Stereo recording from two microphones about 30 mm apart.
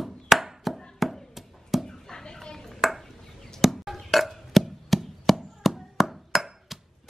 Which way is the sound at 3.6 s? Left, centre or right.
Centre.